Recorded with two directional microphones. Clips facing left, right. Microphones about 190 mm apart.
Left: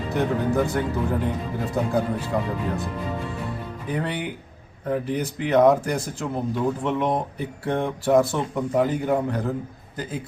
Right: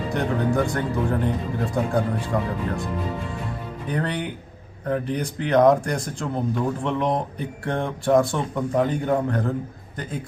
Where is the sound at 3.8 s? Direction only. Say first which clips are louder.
Right 1 dB; 5° left (ahead or behind).